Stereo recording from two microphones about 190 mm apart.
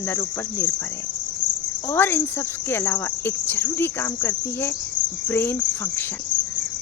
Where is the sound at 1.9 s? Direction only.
10° left (ahead or behind).